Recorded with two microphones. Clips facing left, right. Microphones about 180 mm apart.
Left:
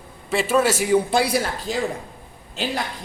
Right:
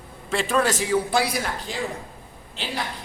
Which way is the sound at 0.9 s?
25° left (ahead or behind).